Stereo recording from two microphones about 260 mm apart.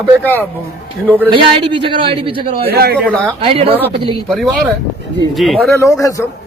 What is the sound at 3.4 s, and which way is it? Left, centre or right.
Speech, right.